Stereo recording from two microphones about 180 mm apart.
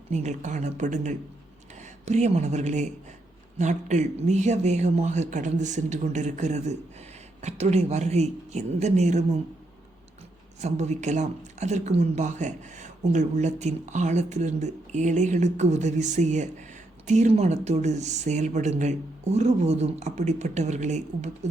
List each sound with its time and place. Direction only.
0.1 s a woman's voice: 40° right (ahead or behind)
10.6 s speech: 40° right (ahead or behind)